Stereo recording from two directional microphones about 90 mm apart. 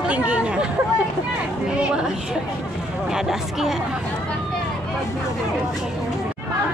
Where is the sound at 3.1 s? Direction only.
5° right (ahead or behind).